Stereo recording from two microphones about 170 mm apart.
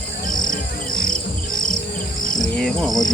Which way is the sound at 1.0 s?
55° left (ahead or behind).